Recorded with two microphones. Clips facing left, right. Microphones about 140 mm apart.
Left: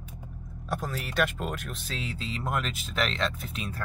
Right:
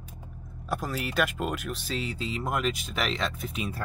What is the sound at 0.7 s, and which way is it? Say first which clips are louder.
Speech: right 2 dB; 5° right (ahead or behind).